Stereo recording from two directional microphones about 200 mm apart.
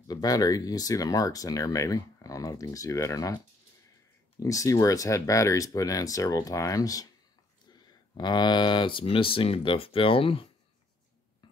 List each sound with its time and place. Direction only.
0.1 s speech: 20° left (ahead or behind)
4.4 s speech: 15° left (ahead or behind)